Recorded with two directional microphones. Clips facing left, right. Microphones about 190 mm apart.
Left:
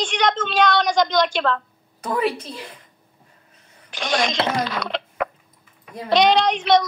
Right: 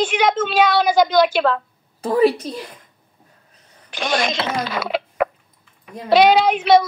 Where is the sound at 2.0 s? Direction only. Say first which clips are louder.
Right 7 dB; 35° right (ahead or behind).